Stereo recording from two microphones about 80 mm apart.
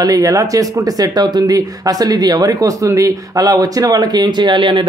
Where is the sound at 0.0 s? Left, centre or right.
Right.